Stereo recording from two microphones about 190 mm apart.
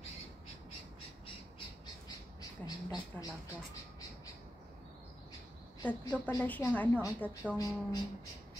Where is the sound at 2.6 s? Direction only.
20° left (ahead or behind).